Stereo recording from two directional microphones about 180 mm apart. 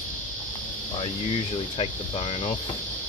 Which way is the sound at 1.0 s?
30° left (ahead or behind).